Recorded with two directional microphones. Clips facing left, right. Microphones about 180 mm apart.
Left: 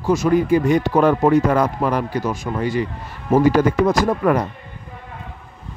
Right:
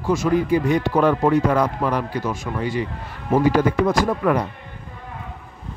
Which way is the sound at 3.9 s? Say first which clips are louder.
Left 2 dB; 45° left (ahead or behind).